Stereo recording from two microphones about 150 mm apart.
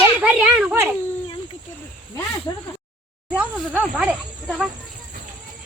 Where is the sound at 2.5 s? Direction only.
30° left (ahead or behind).